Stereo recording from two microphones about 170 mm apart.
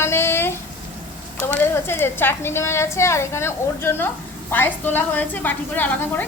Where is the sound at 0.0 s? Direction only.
15° left (ahead or behind).